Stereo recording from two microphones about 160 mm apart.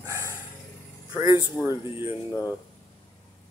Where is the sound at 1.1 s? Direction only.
20° right (ahead or behind).